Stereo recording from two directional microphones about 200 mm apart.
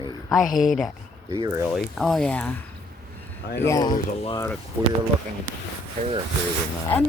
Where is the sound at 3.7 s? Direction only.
20° left (ahead or behind).